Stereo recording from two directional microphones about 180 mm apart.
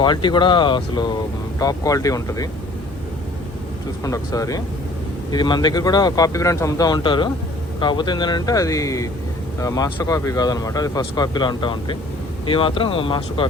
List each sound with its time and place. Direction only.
0.0 s speech: 25° left (ahead or behind)
4.0 s speech: 20° left (ahead or behind)